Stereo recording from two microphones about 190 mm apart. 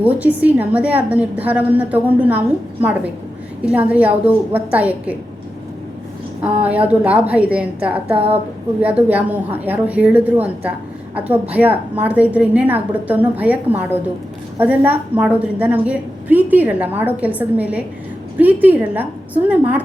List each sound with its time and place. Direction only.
0.0 s a woman's voice: 10° right (ahead or behind)
3.7 s a woman's voice: 10° right (ahead or behind)
6.4 s a woman's voice: 5° right (ahead or behind)
8.1 s speech: 30° right (ahead or behind)
8.8 s a woman's voice: 10° right (ahead or behind)